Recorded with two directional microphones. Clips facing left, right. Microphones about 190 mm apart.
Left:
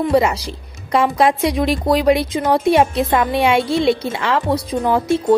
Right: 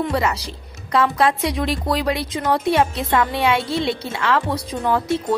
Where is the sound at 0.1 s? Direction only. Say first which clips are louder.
Left 6 dB; 15° left (ahead or behind).